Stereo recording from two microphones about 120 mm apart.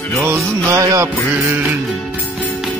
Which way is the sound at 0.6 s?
25° right (ahead or behind).